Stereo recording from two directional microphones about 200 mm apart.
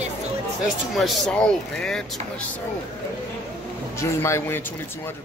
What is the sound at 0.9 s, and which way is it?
Speech, centre (ahead or behind).